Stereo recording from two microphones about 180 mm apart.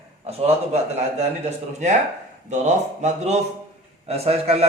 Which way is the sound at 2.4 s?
40° right (ahead or behind).